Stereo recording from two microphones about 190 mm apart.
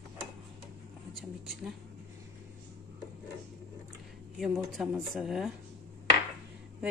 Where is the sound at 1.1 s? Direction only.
Centre (ahead or behind).